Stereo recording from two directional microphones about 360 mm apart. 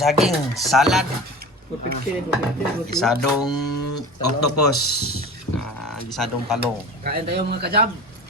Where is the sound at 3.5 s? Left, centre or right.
Left.